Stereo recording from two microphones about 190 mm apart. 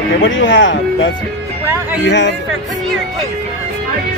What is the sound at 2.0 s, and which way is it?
Speech, 65° left (ahead or behind).